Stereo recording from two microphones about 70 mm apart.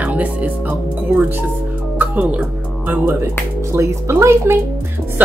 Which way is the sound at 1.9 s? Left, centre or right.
Right.